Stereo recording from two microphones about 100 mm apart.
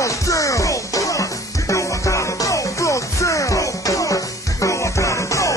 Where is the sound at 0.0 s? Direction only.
35° left (ahead or behind).